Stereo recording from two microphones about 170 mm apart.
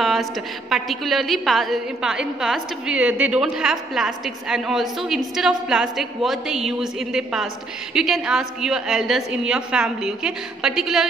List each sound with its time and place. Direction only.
0.0 s a woman's voice: centre (ahead or behind)